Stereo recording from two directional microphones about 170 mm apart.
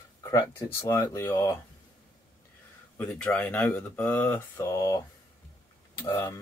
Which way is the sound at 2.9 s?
5° left (ahead or behind).